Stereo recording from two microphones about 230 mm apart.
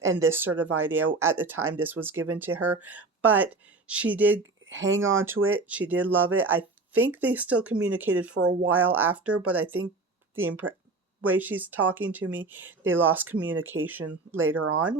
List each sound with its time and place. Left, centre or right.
0.2 s speech: centre
4.6 s speech: right
5.2 s speech: centre
10.3 s speech: right
11.2 s speech: centre
14.3 s speech: right